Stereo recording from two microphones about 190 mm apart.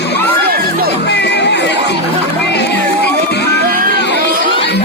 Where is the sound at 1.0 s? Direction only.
65° left (ahead or behind).